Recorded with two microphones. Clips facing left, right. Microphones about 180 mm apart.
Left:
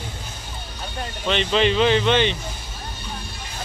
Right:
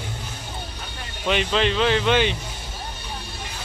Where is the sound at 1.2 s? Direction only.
5° right (ahead or behind).